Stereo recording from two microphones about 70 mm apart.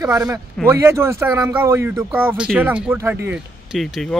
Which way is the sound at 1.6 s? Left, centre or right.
Right.